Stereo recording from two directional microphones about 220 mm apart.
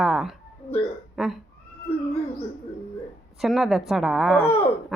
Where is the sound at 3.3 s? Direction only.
Centre (ahead or behind).